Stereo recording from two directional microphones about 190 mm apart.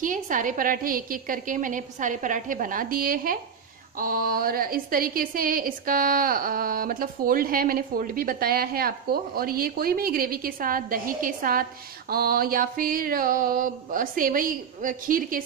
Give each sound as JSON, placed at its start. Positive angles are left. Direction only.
{"t": 0.0, "sound": "speech", "side_deg": -45}